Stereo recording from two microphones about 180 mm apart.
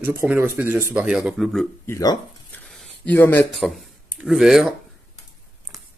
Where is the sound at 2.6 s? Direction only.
5° left (ahead or behind).